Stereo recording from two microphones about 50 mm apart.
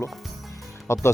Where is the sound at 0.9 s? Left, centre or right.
Left.